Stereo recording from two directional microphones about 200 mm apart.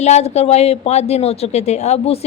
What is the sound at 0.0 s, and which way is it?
A woman's voice, 35° left (ahead or behind).